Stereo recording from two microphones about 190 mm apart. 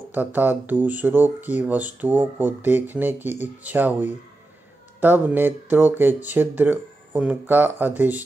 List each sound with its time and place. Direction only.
0.1 s speech: 10° right (ahead or behind)